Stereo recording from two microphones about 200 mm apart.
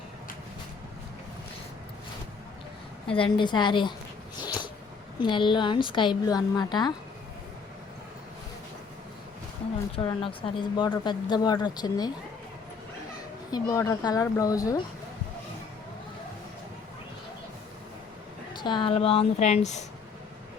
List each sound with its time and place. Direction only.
3.1 s speech: 25° left (ahead or behind)
4.4 s a sound: 20° left (ahead or behind)
5.2 s speech: 25° left (ahead or behind)
9.9 s speech: 25° left (ahead or behind)
13.5 s speech: 15° left (ahead or behind)
18.5 s speech: 25° left (ahead or behind)